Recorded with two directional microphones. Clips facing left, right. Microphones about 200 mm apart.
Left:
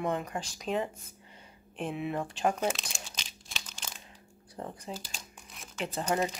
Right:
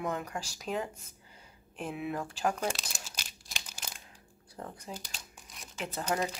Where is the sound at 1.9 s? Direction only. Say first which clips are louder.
Left 1 dB; centre (ahead or behind).